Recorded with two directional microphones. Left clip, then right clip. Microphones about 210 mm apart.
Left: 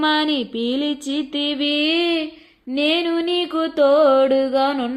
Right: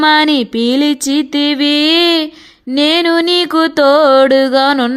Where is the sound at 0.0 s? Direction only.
55° right (ahead or behind).